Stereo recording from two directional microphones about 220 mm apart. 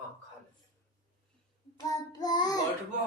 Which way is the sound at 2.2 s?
20° left (ahead or behind).